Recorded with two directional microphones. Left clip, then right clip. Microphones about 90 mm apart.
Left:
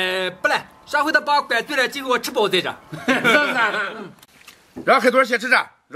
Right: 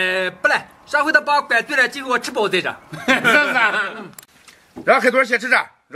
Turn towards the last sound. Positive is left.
turn(degrees=5)  # may be behind; listen again after turning